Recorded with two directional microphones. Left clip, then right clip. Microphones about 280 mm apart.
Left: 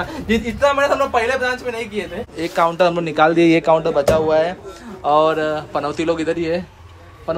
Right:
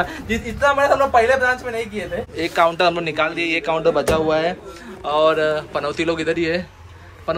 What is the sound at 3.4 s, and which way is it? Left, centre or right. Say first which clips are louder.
A man's voice: left 7 dB; left.